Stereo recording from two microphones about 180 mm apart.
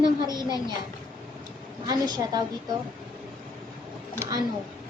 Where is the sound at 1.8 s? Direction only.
20° right (ahead or behind).